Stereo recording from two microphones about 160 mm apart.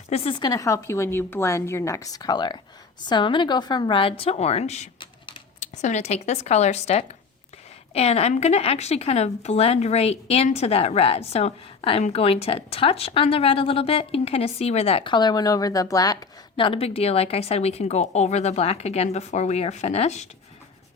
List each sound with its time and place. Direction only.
0.1 s a woman's voice: 35° left (ahead or behind)
16.6 s speech: 35° left (ahead or behind)